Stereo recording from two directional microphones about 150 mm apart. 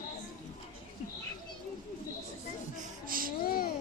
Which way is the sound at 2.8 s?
70° right (ahead or behind).